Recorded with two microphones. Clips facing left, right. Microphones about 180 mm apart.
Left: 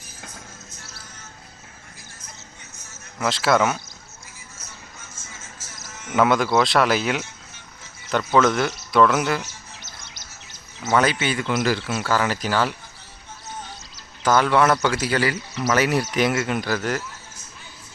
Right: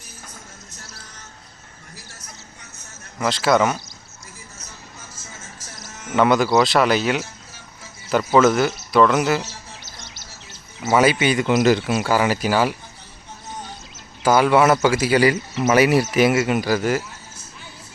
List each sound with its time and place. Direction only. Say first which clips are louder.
3.2 s speech: right 2 dB; centre (ahead or behind)
6.1 s speech: right 2 dB; centre (ahead or behind)
10.8 s speech: right 4 dB; 10° right (ahead or behind)
14.2 s speech: right 3 dB; 10° right (ahead or behind)
15.3 s speech: right 5 dB; 20° right (ahead or behind)
15.7 s speech: right 5 dB; 10° right (ahead or behind)